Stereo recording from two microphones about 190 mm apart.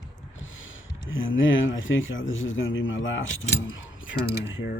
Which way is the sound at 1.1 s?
90° left.